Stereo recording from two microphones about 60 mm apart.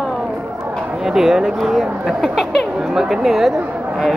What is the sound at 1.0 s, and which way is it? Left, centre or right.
Speech, centre.